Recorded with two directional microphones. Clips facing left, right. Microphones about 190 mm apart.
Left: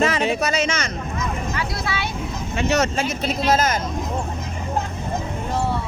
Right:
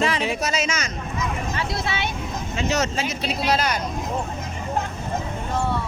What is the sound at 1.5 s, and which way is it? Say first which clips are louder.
Vehicle: even; 25° right (ahead or behind).